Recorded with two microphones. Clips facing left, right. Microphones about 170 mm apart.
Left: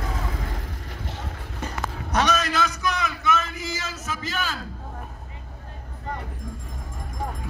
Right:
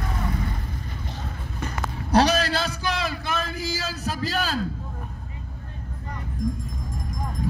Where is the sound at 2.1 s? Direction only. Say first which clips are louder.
Right 4 dB; 35° right (ahead or behind).